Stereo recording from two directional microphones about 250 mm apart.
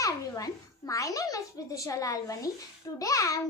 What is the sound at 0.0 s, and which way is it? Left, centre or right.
A child's voice, centre.